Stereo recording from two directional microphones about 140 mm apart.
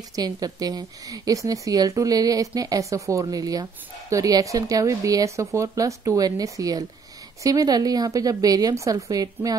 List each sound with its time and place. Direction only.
0.1 s a woman's voice: 25° right (ahead or behind)